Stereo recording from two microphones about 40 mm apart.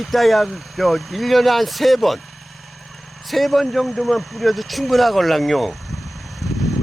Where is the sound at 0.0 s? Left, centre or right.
Centre.